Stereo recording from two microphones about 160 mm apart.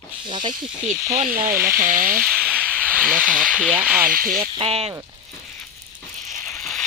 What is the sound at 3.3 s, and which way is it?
Speech, 5° right (ahead or behind).